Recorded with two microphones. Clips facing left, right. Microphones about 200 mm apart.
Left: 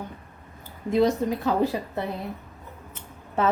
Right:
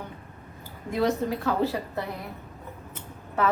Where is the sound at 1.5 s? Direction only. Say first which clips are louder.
Left 2 dB; 15° left (ahead or behind).